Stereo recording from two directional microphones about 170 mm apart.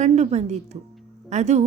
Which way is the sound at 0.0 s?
40° right (ahead or behind).